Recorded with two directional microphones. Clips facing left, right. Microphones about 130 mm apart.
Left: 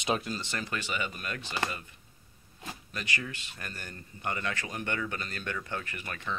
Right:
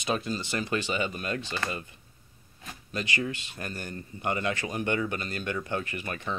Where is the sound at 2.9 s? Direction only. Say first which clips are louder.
Right 6 dB; 25° right (ahead or behind).